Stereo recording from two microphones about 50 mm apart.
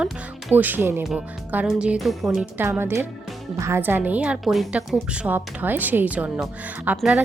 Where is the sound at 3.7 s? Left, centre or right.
Right.